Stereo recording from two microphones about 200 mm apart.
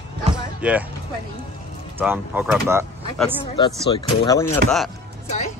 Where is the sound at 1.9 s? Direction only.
10° right (ahead or behind).